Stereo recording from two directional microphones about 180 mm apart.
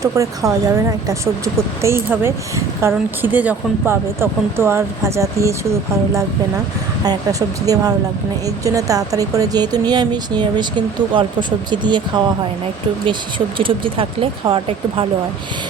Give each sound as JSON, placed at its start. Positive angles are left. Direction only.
{"t": 0.0, "sound": "a woman's voice", "side_deg": -20}
{"t": 7.0, "sound": "speech", "side_deg": -20}
{"t": 13.6, "sound": "speech", "side_deg": -30}